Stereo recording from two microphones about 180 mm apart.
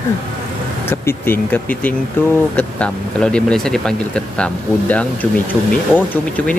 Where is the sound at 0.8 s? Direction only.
10° left (ahead or behind).